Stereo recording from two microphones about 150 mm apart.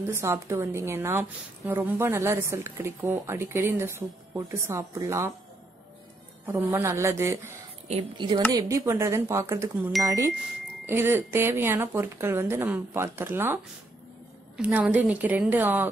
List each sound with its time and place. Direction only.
0.0 s a woman's voice: 15° right (ahead or behind)
6.4 s a woman's voice: 15° right (ahead or behind)
14.6 s a woman's voice: 10° right (ahead or behind)